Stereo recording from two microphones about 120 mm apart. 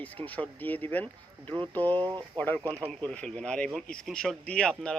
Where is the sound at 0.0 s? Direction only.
15° left (ahead or behind).